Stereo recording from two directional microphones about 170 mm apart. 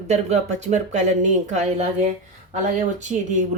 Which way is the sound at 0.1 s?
40° right (ahead or behind).